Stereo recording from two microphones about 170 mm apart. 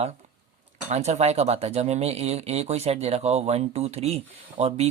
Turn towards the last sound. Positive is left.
turn(degrees=-40)  # may be behind; listen again after turning